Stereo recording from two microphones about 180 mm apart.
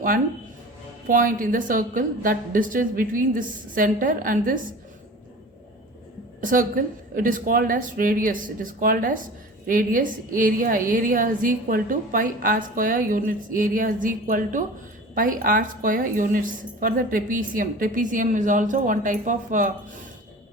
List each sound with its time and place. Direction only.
1.0 s a woman's voice: 50° right (ahead or behind)
6.4 s a woman's voice: 50° right (ahead or behind)